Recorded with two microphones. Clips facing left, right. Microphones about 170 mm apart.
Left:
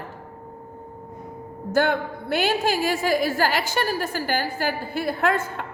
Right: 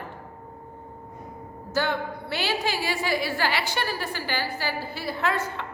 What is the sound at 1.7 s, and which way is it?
A woman's voice, 55° left (ahead or behind).